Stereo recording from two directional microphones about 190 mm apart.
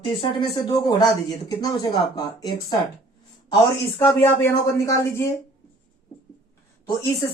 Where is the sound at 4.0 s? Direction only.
10° left (ahead or behind).